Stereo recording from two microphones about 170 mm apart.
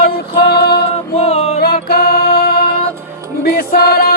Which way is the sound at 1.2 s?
35° left (ahead or behind).